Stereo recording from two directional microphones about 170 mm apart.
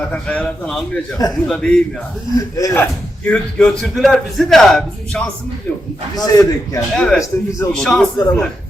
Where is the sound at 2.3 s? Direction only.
20° left (ahead or behind).